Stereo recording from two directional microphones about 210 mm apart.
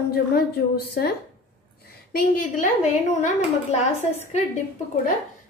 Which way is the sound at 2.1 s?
40° left (ahead or behind).